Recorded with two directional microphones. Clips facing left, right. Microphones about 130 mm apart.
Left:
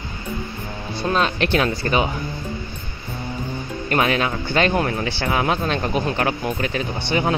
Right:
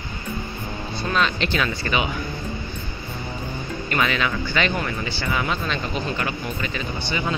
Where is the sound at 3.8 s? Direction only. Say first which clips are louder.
Left 4 dB; 45° left (ahead or behind).